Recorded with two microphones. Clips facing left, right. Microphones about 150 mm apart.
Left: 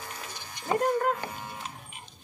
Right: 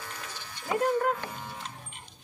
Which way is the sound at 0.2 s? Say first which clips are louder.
Left 1 dB; 15° left (ahead or behind).